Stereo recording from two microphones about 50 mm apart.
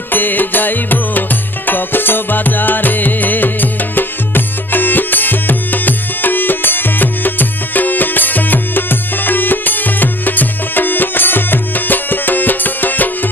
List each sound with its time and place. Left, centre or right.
0.1 s music: left